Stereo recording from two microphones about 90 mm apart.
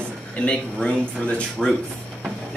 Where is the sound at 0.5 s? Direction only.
10° left (ahead or behind).